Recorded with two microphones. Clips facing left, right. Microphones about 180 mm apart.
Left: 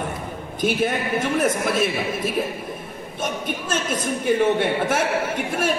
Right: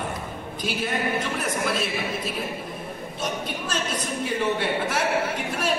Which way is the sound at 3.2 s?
50° left (ahead or behind).